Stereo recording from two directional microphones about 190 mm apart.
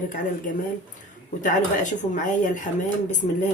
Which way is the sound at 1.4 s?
40° left (ahead or behind).